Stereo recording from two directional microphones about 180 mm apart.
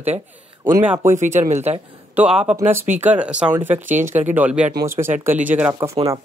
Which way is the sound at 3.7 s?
45° right (ahead or behind).